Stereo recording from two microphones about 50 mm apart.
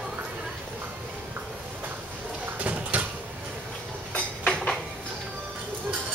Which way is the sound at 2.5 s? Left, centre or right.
Right.